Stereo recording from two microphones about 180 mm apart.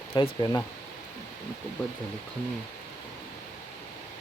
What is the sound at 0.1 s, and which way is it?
Speech, 25° left (ahead or behind).